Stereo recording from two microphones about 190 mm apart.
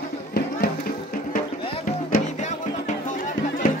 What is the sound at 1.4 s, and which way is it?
Music, 45° left (ahead or behind).